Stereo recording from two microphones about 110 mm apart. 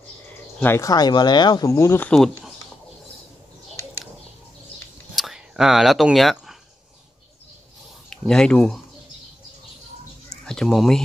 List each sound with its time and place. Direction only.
0.6 s speech: 20° left (ahead or behind)
0.8 s speech: 40° left (ahead or behind)
2.0 s speech: 5° left (ahead or behind)
5.1 s a sound: 5° right (ahead or behind)
8.1 s speech: 5° left (ahead or behind)
10.3 s a sound: 5° left (ahead or behind)